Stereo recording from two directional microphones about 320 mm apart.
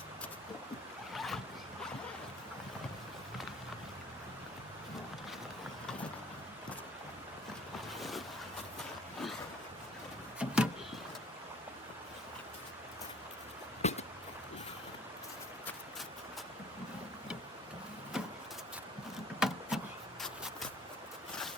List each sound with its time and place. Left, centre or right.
1.1 s boat: centre
7.9 s vehicle: centre
10.3 s vehicle: centre
13.8 s a sound: centre
18.1 s vehicle: centre